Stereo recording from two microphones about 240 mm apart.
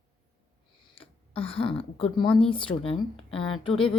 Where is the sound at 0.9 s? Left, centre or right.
Left.